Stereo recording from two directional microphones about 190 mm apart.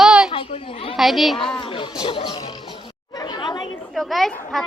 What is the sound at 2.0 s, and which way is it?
Speech, 25° left (ahead or behind).